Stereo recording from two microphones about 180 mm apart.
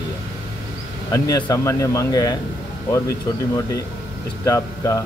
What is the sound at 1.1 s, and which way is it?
Speech, 20° left (ahead or behind).